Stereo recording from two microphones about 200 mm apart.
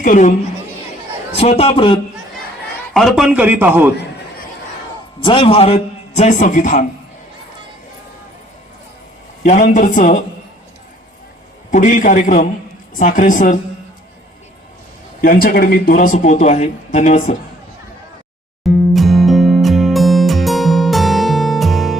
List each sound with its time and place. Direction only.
0.0 s speech: 40° left (ahead or behind)
1.4 s a man's voice: 30° left (ahead or behind)
2.9 s a man's voice: centre (ahead or behind)
5.2 s a man's voice: 25° left (ahead or behind)
9.4 s speech: 40° left (ahead or behind)
11.7 s speech: 40° left (ahead or behind)
15.2 s speech: 45° left (ahead or behind)
18.6 s music: centre (ahead or behind)